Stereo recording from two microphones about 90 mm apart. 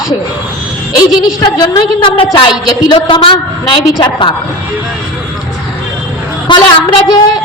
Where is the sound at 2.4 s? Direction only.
60° left (ahead or behind).